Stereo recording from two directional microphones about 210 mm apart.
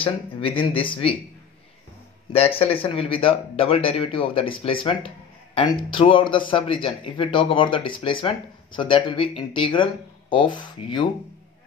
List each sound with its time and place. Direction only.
0.0 s speech: 25° left (ahead or behind)
2.3 s speech: 30° left (ahead or behind)